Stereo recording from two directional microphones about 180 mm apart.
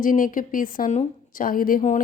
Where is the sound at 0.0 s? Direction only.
50° left (ahead or behind).